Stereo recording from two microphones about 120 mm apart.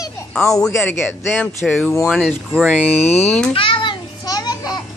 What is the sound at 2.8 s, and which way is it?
Speech, 65° left (ahead or behind).